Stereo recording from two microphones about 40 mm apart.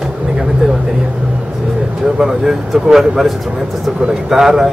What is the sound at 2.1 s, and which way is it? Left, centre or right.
Speech, centre.